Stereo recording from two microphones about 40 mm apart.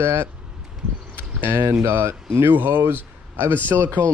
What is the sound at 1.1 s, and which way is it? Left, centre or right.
Speech, right.